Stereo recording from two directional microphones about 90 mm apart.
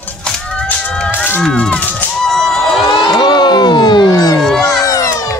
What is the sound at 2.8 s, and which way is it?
Crowd, 55° left (ahead or behind).